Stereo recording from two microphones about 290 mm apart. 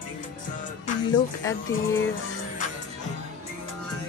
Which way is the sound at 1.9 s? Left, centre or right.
Left.